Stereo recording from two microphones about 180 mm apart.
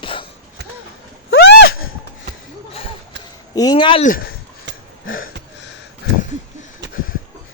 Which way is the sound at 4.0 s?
50° left (ahead or behind).